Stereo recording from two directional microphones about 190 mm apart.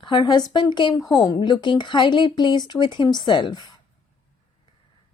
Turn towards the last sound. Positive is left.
turn(degrees=25)  # may be behind; listen again after turning